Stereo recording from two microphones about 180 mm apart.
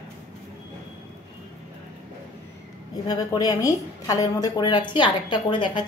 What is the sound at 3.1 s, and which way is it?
A woman's voice, 20° left (ahead or behind).